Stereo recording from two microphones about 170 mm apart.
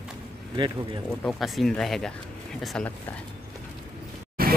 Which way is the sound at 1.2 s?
Centre (ahead or behind).